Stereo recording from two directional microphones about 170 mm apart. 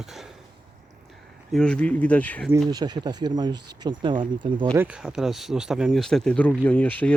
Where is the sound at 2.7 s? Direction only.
25° right (ahead or behind).